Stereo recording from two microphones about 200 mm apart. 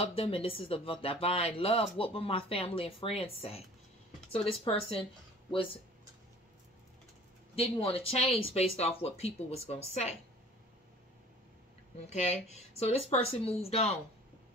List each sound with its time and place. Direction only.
0.0 s speech: 25° left (ahead or behind)
7.5 s speech: 30° left (ahead or behind)
12.1 s speech: 35° left (ahead or behind)